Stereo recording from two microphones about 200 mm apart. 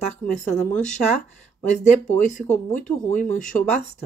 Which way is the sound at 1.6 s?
35° left (ahead or behind).